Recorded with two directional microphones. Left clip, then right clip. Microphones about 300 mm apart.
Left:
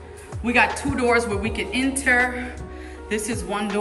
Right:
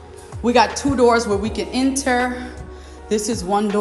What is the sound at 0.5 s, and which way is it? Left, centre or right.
A woman's voice, centre.